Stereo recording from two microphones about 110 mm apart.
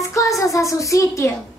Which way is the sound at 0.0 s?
30° left (ahead or behind).